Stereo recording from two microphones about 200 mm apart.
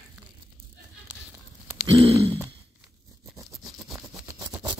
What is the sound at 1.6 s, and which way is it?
Grunt, 25° right (ahead or behind).